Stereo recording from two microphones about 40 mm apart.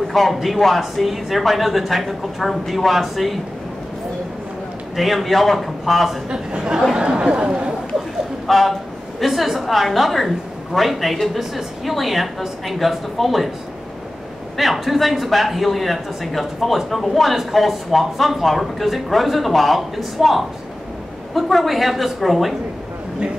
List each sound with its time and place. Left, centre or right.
0.1 s a man's voice: centre
4.9 s a man's voice: centre
7.0 s speech: right
8.5 s a man's voice: centre
14.6 s a man's voice: centre